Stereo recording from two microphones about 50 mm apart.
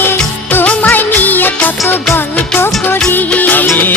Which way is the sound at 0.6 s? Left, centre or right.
Left.